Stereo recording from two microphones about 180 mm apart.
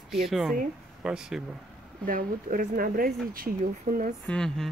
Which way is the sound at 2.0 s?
50° right (ahead or behind).